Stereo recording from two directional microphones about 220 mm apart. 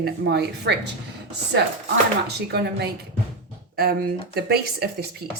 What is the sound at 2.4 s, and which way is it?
Speech, 50° right (ahead or behind).